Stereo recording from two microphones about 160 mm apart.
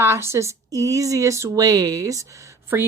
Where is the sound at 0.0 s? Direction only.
15° right (ahead or behind).